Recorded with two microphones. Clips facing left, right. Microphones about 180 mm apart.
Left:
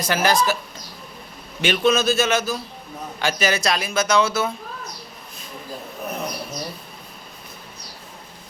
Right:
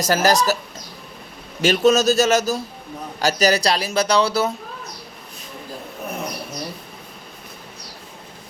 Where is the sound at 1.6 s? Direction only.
40° right (ahead or behind).